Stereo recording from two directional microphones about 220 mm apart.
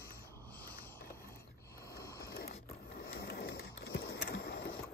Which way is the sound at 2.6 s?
45° left (ahead or behind).